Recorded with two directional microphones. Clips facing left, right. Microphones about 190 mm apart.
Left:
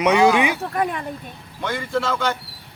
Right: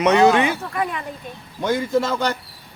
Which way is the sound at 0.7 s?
45° left (ahead or behind).